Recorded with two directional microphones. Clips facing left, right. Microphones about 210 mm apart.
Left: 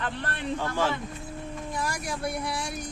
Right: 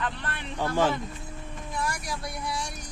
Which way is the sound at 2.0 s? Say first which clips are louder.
Left 4 dB; 55° left (ahead or behind).